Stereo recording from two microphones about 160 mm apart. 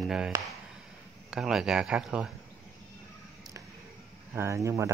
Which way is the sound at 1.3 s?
5° right (ahead or behind).